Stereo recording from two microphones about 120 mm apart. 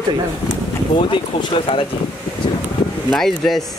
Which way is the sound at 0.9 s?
45° left (ahead or behind).